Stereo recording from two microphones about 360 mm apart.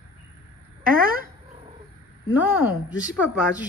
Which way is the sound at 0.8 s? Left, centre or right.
Right.